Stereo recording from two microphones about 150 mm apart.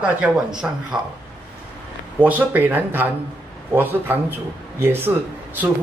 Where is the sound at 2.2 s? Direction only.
10° right (ahead or behind).